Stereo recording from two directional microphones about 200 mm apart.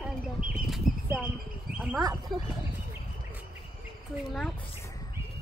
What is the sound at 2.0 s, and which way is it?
Speech, 20° right (ahead or behind).